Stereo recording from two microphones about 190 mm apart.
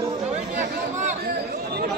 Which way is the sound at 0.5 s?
40° right (ahead or behind).